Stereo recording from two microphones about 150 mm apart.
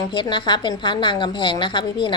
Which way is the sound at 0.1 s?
30° left (ahead or behind).